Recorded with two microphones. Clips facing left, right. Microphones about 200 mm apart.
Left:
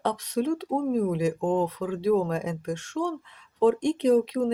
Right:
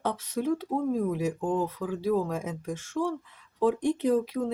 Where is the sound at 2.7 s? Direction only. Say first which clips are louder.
Left 4 dB; 75° left (ahead or behind).